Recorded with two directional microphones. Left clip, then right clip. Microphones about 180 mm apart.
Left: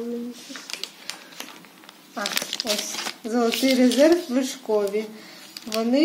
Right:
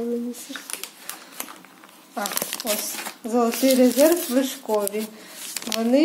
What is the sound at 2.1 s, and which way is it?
Speech, 20° right (ahead or behind).